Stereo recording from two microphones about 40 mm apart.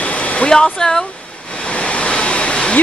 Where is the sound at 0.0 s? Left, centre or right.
Left.